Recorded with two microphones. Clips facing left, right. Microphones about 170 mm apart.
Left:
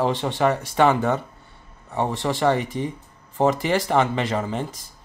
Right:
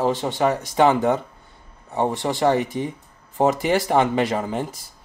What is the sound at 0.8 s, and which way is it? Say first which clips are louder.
Speech: right 2 dB; 15° right (ahead or behind).